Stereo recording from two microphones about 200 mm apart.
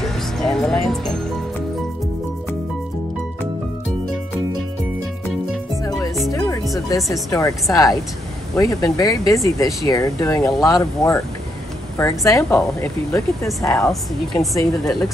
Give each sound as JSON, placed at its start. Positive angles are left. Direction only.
{"t": 0.4, "sound": "speech", "side_deg": 0}
{"t": 7.1, "sound": "speech", "side_deg": 15}
{"t": 13.5, "sound": "speech", "side_deg": 0}